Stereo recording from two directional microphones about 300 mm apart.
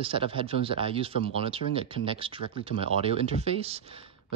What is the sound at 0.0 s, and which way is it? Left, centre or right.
Speech, centre.